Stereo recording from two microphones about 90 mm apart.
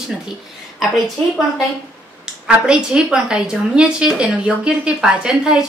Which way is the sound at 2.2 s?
10° right (ahead or behind).